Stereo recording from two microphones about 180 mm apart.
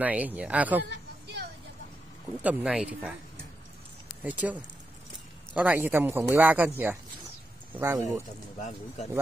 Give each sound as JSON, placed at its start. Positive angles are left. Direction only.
{"t": 0.0, "sound": "speech", "side_deg": -10}
{"t": 0.8, "sound": "a sound", "side_deg": -65}
{"t": 2.4, "sound": "speech", "side_deg": -5}
{"t": 4.2, "sound": "speech", "side_deg": -10}
{"t": 7.7, "sound": "speech", "side_deg": -15}
{"t": 8.5, "sound": "speech", "side_deg": 45}